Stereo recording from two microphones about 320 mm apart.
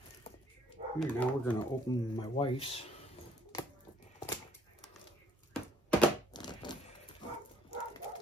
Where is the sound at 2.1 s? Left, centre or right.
Centre.